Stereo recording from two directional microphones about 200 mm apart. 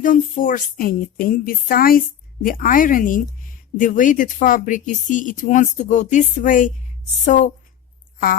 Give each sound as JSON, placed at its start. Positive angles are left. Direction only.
{"t": 0.0, "sound": "speech", "side_deg": 40}